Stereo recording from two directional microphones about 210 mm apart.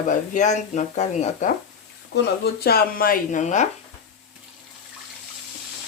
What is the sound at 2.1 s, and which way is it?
Speech, 50° left (ahead or behind).